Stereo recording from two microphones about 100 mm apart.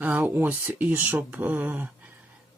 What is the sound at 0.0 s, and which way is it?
Speech, 15° right (ahead or behind).